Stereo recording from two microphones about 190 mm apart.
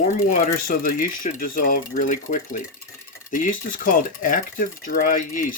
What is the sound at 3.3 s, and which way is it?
Speech, 45° left (ahead or behind).